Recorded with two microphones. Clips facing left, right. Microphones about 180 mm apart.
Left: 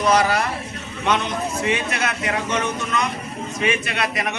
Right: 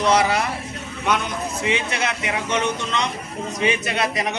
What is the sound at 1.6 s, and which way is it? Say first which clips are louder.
A man's voice: right 1 dB; 20° right (ahead or behind).